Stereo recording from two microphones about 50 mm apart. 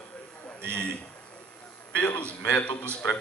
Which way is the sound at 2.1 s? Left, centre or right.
Left.